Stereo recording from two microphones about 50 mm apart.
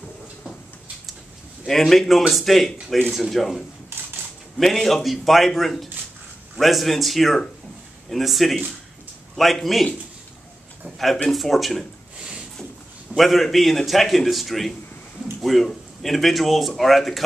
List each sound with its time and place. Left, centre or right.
1.7 s speech: centre
3.9 s typewriter: right
4.6 s speech: centre
11.2 s speech: centre
13.1 s speech: centre